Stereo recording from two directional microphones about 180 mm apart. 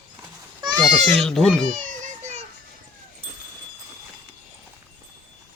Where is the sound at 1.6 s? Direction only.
45° right (ahead or behind).